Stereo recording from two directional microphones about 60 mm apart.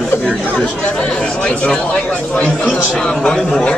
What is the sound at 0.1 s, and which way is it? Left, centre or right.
Chatter, left.